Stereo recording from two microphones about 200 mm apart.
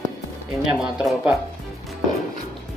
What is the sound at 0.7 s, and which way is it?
Speech, 5° right (ahead or behind).